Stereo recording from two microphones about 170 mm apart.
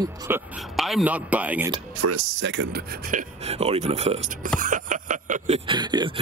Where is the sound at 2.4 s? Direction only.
90° right.